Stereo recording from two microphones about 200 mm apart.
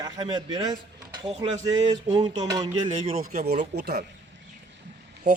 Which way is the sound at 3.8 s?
50° right (ahead or behind).